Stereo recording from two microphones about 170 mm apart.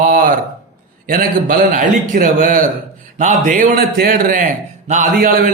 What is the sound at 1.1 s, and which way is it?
A man's voice, 55° right (ahead or behind).